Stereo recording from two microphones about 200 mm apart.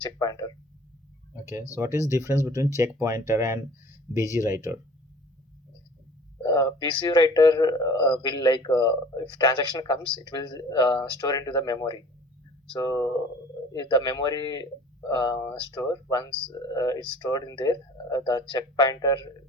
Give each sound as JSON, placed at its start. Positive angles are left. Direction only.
{"t": 0.2, "sound": "speech", "side_deg": 20}
{"t": 1.7, "sound": "speech", "side_deg": -15}
{"t": 6.4, "sound": "speech", "side_deg": 20}